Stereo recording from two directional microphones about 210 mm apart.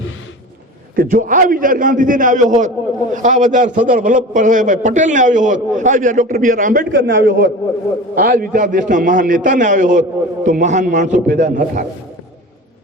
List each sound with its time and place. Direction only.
0.9 s a man's voice: 40° right (ahead or behind)
6.9 s a man's voice: 60° right (ahead or behind)
8.1 s a man's voice: 45° right (ahead or behind)